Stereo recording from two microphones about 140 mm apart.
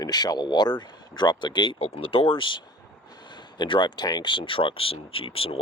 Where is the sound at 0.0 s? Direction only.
30° left (ahead or behind).